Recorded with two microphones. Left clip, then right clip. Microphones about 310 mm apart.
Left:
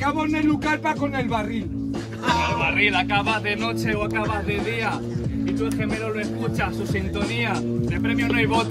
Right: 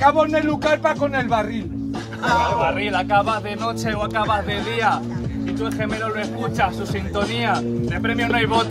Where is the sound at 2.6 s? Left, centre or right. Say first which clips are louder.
Even; centre.